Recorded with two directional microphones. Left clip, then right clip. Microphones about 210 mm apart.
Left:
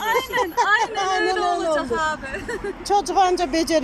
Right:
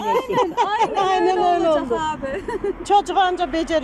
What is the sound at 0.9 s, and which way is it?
Speech, 25° right (ahead or behind).